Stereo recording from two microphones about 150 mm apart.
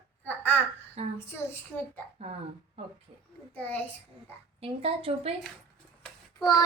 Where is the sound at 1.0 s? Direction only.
45° right (ahead or behind).